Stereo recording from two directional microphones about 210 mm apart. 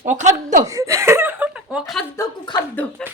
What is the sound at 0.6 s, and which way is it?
Chuckle, 15° right (ahead or behind).